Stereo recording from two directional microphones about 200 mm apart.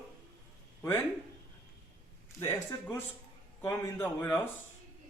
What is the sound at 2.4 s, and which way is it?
A man's voice, 15° left (ahead or behind).